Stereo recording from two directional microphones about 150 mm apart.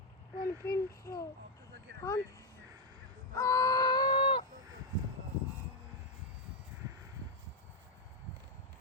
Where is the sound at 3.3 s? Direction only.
20° left (ahead or behind).